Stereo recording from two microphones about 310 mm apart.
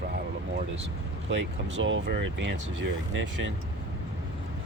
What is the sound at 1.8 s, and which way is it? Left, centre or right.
Speech, right.